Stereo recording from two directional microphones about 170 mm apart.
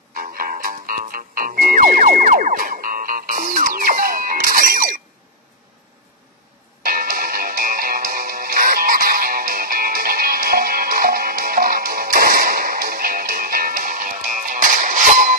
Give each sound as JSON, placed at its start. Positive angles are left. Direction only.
{"t": 0.1, "sound": "music", "side_deg": -55}
{"t": 6.8, "sound": "music", "side_deg": -55}